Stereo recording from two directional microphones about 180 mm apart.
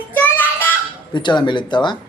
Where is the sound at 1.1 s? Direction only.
25° left (ahead or behind).